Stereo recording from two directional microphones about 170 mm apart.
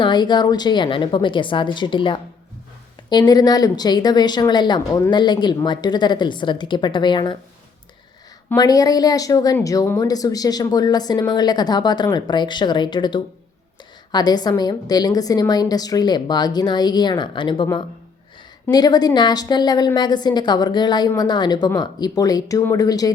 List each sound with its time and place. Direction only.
0.0 s speech: 25° left (ahead or behind)
8.5 s speech: 20° left (ahead or behind)